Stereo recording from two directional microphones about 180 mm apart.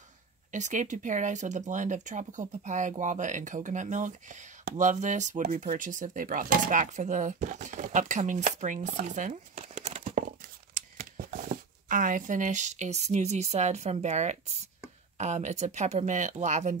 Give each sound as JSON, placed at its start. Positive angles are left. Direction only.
{"t": 0.5, "sound": "speech", "side_deg": -40}